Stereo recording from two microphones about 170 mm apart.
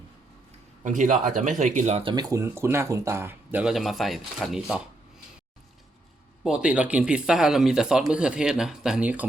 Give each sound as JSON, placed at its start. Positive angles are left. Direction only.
{"t": 0.9, "sound": "speech", "side_deg": -50}
{"t": 2.1, "sound": "speech", "side_deg": -15}
{"t": 6.4, "sound": "speech", "side_deg": -5}